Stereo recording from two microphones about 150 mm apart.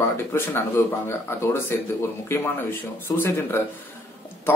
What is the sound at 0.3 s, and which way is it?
A man's voice, 15° left (ahead or behind).